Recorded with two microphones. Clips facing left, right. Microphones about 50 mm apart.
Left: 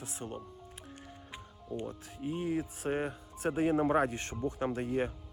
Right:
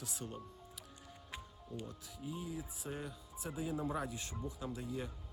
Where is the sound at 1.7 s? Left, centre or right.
Left.